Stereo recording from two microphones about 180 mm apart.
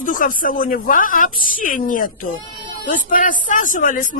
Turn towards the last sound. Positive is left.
turn(degrees=45)  # may be behind; listen again after turning